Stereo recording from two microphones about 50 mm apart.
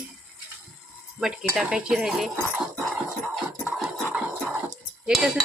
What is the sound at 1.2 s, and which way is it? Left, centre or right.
Speech, centre.